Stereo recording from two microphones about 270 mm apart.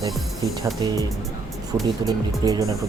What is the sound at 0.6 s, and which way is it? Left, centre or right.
Speech, centre.